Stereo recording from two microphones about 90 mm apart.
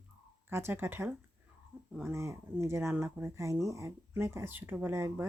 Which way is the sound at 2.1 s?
30° right (ahead or behind).